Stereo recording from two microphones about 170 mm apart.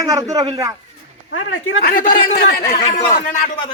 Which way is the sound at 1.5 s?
60° left (ahead or behind).